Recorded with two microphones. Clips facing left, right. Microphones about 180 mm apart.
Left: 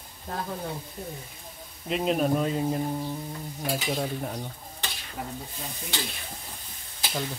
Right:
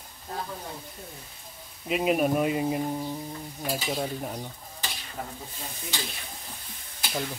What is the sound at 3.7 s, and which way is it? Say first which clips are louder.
Stir: left 1 dB; centre (ahead or behind).